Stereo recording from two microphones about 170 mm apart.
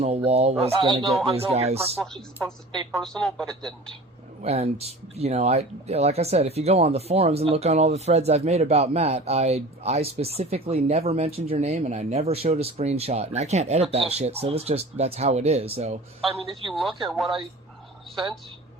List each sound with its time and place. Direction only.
0.0 s speech: 35° right (ahead or behind)
2.4 s a woman's voice: 10° left (ahead or behind)
4.4 s speech: 40° right (ahead or behind)
17.1 s speech: centre (ahead or behind)